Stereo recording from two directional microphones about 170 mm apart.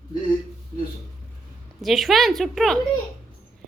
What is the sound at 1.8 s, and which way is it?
Speech, centre (ahead or behind).